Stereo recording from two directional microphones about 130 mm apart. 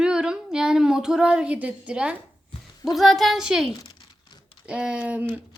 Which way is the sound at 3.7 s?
30° left (ahead or behind).